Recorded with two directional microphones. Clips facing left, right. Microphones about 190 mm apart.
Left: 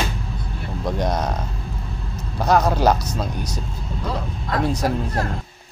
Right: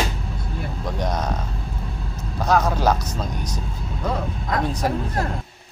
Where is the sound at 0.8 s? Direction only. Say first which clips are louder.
Left 4 dB; 10° left (ahead or behind).